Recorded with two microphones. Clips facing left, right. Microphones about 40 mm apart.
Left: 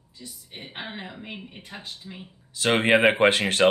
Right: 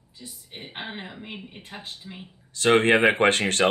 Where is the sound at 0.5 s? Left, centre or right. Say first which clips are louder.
Right 1 dB; right.